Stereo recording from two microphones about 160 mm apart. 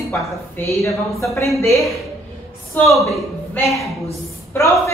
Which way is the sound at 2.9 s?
Centre (ahead or behind).